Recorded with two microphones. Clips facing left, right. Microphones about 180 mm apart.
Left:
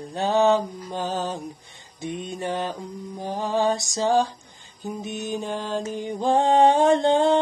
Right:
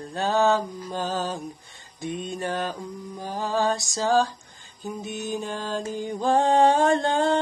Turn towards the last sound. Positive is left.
turn(degrees=20)  # may be behind; listen again after turning